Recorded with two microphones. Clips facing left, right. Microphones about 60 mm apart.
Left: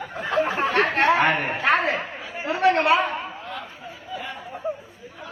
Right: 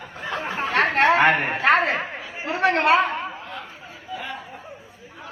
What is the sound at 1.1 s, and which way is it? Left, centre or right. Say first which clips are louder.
Speech: right 2 dB; right.